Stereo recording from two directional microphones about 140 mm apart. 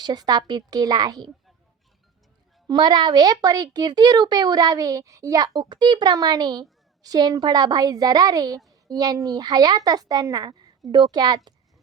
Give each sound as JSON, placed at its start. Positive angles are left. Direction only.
{"t": 0.0, "sound": "speech", "side_deg": -30}
{"t": 2.6, "sound": "speech", "side_deg": -30}